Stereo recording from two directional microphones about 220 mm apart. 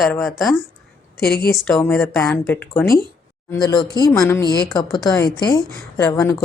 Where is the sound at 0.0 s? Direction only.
Centre (ahead or behind).